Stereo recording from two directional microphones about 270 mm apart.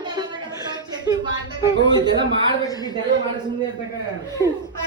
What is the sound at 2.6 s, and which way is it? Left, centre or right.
Speech, centre.